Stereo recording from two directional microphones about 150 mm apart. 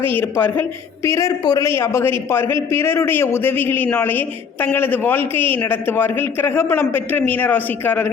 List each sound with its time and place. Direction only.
0.0 s a man's voice: 15° left (ahead or behind)